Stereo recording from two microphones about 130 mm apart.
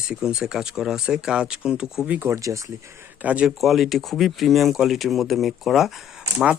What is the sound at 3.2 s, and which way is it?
Speech, 10° right (ahead or behind).